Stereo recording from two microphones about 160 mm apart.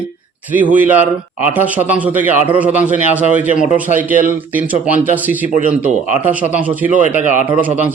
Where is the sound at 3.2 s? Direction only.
50° left (ahead or behind).